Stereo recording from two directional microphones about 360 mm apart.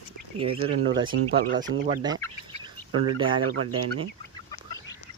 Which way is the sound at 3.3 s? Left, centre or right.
Centre.